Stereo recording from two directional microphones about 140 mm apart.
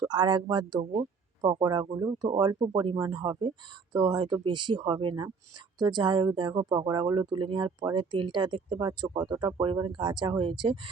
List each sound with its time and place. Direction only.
0.0 s speech: 30° right (ahead or behind)